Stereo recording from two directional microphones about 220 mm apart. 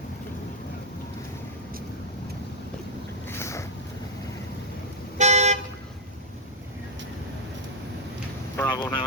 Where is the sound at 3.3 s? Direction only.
10° left (ahead or behind).